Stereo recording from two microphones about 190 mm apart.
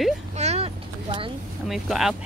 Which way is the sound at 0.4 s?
35° right (ahead or behind).